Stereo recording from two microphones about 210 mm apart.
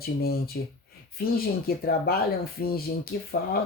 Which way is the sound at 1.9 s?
45° left (ahead or behind).